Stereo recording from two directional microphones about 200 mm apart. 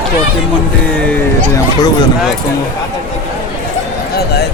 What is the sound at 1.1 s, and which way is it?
Speech, 15° left (ahead or behind).